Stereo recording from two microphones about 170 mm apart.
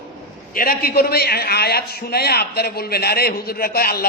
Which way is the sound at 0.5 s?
60° left (ahead or behind).